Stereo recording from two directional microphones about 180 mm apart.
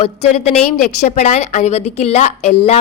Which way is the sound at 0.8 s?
40° left (ahead or behind).